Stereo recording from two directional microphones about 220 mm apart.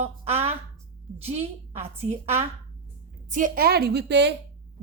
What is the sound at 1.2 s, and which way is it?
Speech, 30° right (ahead or behind).